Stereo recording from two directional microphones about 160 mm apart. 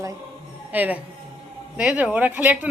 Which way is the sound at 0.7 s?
10° right (ahead or behind).